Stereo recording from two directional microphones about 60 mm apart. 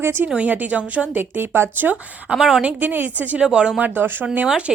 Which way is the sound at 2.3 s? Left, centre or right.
Centre.